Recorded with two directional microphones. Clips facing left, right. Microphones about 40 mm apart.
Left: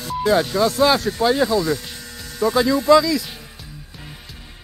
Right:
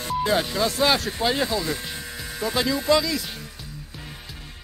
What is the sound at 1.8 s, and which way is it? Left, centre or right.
Speech, centre.